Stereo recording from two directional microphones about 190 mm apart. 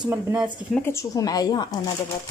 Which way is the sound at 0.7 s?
15° left (ahead or behind).